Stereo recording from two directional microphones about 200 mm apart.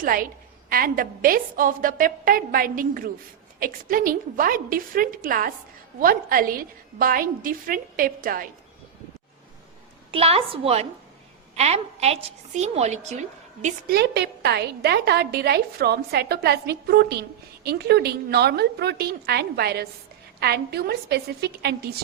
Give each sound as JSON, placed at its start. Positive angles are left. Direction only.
{"t": 0.0, "sound": "a woman's voice", "side_deg": -45}
{"t": 10.1, "sound": "a woman's voice", "side_deg": -30}
{"t": 13.9, "sound": "a woman's voice", "side_deg": -55}